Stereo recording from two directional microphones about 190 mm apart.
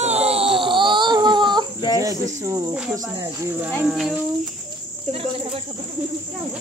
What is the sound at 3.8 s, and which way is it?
Speech, 5° right (ahead or behind).